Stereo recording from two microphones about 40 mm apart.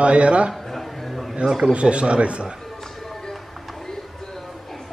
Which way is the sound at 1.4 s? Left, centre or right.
Centre.